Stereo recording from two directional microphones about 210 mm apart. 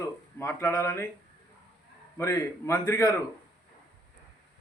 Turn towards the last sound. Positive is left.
turn(degrees=15)  # may be behind; listen again after turning